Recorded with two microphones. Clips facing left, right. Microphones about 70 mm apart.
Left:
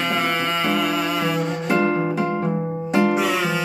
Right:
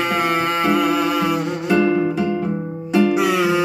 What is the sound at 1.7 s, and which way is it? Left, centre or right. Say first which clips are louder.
Music: right 4 dB; left.